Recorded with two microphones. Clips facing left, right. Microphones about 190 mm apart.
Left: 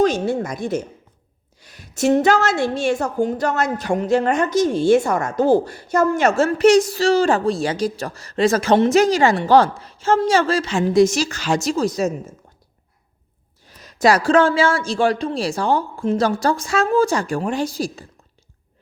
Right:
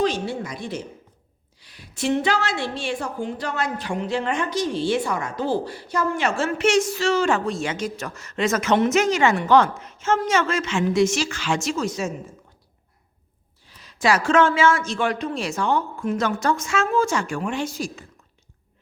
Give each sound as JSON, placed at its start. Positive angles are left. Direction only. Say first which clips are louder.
{"t": 0.0, "sound": "a sound", "louder": "left 6 dB", "side_deg": 45}
{"t": 1.6, "sound": "a woman's voice", "louder": "left 6 dB", "side_deg": 45}
{"t": 13.7, "sound": "a woman's voice", "louder": "left 5 dB", "side_deg": 45}